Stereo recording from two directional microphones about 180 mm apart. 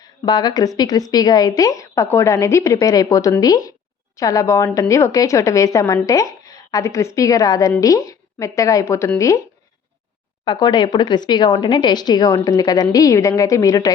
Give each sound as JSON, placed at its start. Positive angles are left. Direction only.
{"t": 0.0, "sound": "a woman's voice", "side_deg": 25}
{"t": 10.4, "sound": "a woman's voice", "side_deg": 25}